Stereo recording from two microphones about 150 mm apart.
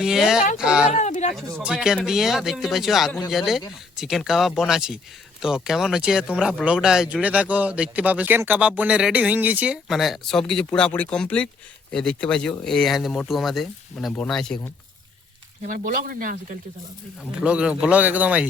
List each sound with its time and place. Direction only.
0.0 s speech: 5° right (ahead or behind)
0.9 s speech: 50° left (ahead or behind)
1.6 s speech: 5° right (ahead or behind)
15.6 s speech: 60° right (ahead or behind)
17.4 s speech: 5° right (ahead or behind)